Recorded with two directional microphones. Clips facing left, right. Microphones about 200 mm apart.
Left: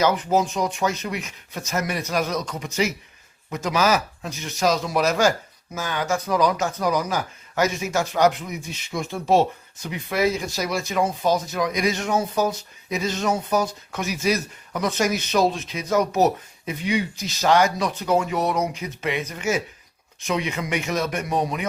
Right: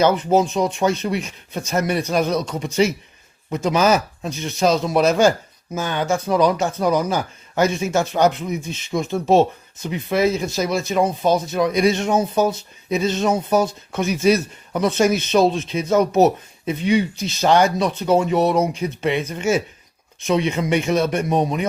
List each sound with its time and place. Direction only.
0.0 s speech: 25° right (ahead or behind)